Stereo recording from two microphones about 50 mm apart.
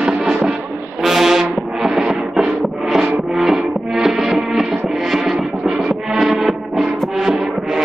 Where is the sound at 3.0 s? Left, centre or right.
Centre.